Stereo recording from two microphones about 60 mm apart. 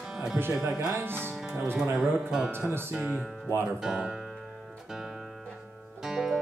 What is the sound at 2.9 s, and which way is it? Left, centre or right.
Speech, centre.